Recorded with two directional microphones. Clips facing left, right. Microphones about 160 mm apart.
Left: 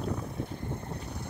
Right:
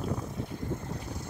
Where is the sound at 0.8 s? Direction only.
65° left (ahead or behind).